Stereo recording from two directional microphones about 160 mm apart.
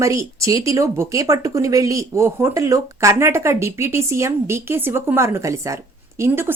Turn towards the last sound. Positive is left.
turn(degrees=-15)  # may be behind; listen again after turning